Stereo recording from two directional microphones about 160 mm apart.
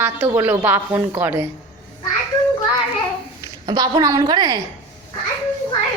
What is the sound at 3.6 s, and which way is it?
Speech, 25° right (ahead or behind).